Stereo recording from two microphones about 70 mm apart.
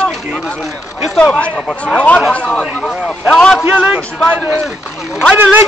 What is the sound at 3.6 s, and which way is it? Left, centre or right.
A man's voice, right.